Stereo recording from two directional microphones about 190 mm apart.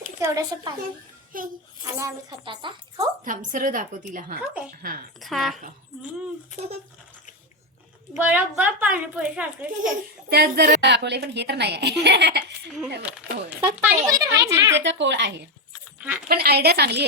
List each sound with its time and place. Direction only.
0.2 s speech: 20° right (ahead or behind)
1.3 s a woman's voice: 45° right (ahead or behind)
2.0 s speech: 20° right (ahead or behind)
3.2 s a woman's voice: 45° right (ahead or behind)
5.2 s speech: centre (ahead or behind)
8.1 s a child's voice: 10° right (ahead or behind)
10.2 s a woman's voice: 55° right (ahead or behind)
13.0 s a child's voice: 5° right (ahead or behind)
14.8 s a woman's voice: 70° right (ahead or behind)